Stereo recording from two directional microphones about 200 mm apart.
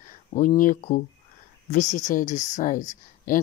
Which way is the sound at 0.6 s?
40° left (ahead or behind).